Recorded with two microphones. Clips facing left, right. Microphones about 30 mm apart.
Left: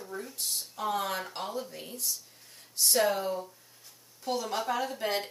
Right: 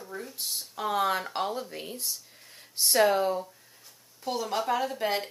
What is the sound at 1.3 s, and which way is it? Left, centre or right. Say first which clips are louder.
Speech: right 5 dB; right.